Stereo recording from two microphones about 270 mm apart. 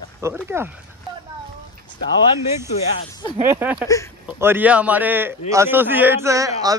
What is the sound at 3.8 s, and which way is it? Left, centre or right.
Speech, centre.